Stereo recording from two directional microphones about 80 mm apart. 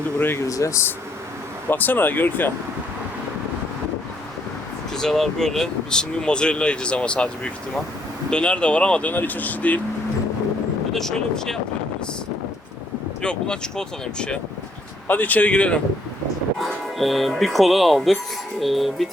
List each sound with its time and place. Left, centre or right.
0.2 s speech: left
0.4 s speech: left
1.7 s speech: left
4.9 s speech: centre
8.3 s speech: centre
10.9 s speech: centre
13.2 s speech: centre
15.0 s speech: left
16.6 s speech: centre
18.6 s music: centre